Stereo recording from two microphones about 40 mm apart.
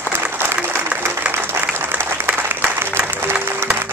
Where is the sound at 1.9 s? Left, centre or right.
Right.